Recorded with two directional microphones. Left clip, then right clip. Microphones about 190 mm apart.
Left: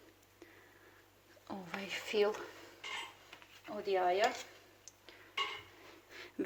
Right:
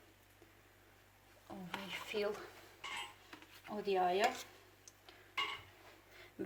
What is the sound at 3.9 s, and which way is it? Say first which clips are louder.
Speech: left 2 dB; 25° left (ahead or behind).